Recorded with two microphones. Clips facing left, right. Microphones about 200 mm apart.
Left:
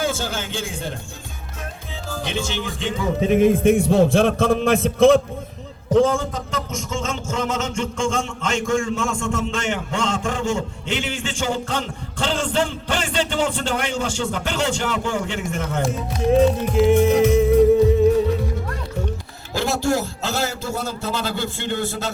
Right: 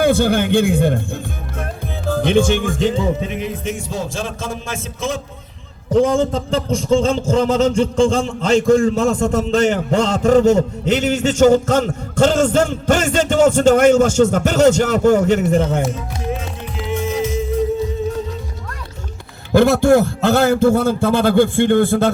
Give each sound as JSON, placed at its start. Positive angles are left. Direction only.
{"t": 0.0, "sound": "speech", "side_deg": -60}
{"t": 1.5, "sound": "music", "side_deg": -55}
{"t": 3.2, "sound": "a man's voice", "side_deg": 50}
{"t": 5.9, "sound": "a man's voice", "side_deg": -15}
{"t": 16.4, "sound": "music", "side_deg": 45}
{"t": 19.5, "sound": "speech", "side_deg": -55}